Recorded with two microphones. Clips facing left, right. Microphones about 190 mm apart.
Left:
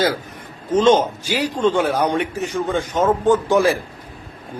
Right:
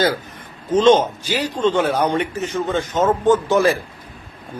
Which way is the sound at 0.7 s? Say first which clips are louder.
Right 1 dB; 10° left (ahead or behind).